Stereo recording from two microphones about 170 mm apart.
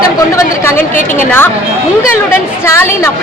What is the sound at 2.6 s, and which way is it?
Speech, 15° left (ahead or behind).